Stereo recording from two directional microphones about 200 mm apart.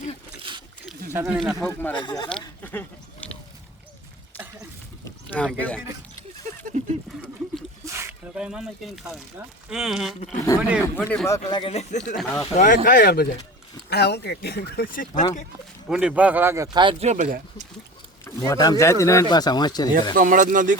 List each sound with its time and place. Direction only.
1.1 s speech: 10° right (ahead or behind)
1.4 s speech: centre (ahead or behind)
2.0 s speech: 20° left (ahead or behind)
2.6 s goat: 10° left (ahead or behind)
5.5 s speech: 5° left (ahead or behind)
6.7 s a sound: 40° right (ahead or behind)
7.9 s speech: 15° right (ahead or behind)
10.9 s speech: 10° left (ahead or behind)
11.4 s speech: 25° left (ahead or behind)
12.1 s speech: 5° left (ahead or behind)
12.5 s speech: 40° left (ahead or behind)
15.9 s speech: 5° right (ahead or behind); by 17.7 s 40° right (ahead or behind)
18.3 s speech: 15° left (ahead or behind)
20.1 s speech: 40° right (ahead or behind)